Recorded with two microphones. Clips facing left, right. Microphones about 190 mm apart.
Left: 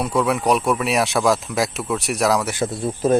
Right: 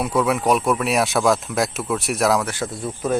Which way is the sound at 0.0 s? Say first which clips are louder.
Even; centre (ahead or behind).